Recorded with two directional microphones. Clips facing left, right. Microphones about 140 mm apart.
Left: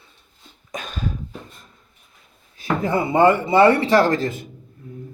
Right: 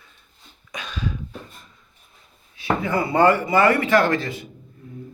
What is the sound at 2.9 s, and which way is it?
Speech, 20° left (ahead or behind).